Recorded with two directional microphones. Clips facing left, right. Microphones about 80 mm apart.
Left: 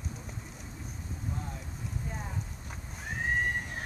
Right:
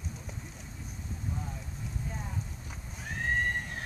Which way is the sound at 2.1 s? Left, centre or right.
Centre.